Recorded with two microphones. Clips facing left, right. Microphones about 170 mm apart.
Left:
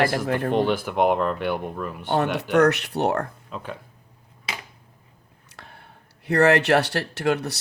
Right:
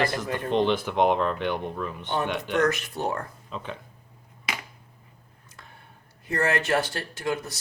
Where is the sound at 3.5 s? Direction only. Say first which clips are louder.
Left 1 dB; 5° left (ahead or behind).